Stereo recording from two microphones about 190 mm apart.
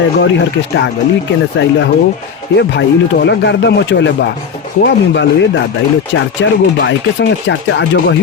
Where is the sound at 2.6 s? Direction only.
65° left (ahead or behind).